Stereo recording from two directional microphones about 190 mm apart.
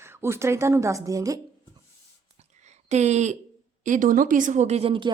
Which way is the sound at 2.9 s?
35° right (ahead or behind).